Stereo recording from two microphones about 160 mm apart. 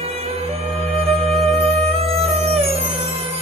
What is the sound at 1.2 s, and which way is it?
Music, 40° right (ahead or behind).